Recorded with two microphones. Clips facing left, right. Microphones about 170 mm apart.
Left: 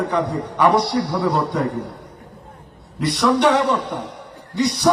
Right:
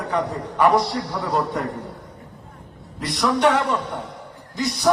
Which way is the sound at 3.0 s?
70° left (ahead or behind).